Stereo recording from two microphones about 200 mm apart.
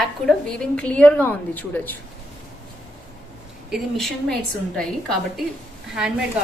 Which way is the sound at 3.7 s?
Centre (ahead or behind).